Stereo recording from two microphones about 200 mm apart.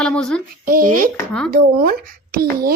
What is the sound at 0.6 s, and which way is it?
Speech, 45° right (ahead or behind).